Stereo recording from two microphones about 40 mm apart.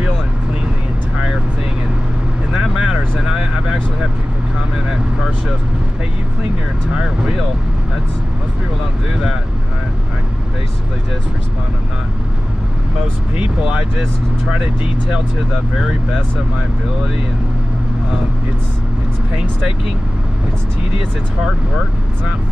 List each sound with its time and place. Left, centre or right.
2.5 s vehicle: centre